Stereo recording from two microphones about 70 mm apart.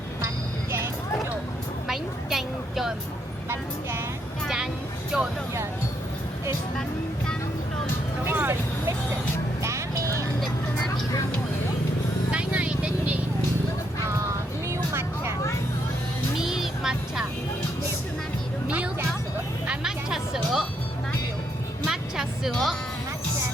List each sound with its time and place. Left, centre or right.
1.9 s vehicle: centre
4.4 s vehicle: centre
8.2 s vehicle: right
9.6 s music: right
12.3 s vehicle: centre
14.7 s vehicle: right
16.4 s music: centre
19.6 s music: centre
21.8 s music: centre